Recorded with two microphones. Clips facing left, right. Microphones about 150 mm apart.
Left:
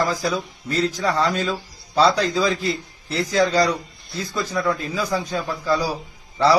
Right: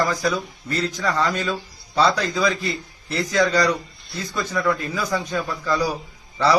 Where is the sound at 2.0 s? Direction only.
30° left (ahead or behind).